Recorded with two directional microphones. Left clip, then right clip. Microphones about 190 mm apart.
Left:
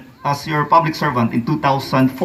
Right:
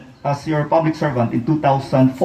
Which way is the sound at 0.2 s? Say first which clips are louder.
Left 2 dB; 30° right (ahead or behind).